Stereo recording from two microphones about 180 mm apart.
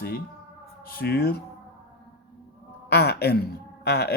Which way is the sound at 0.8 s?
55° left (ahead or behind).